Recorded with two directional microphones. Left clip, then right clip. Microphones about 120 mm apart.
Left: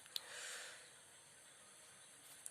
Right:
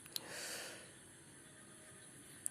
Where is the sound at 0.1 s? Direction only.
40° right (ahead or behind).